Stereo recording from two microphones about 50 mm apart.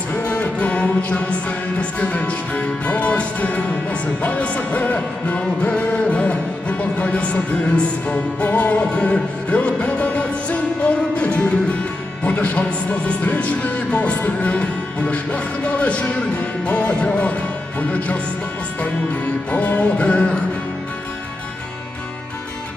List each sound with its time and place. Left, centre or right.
0.1 s music: left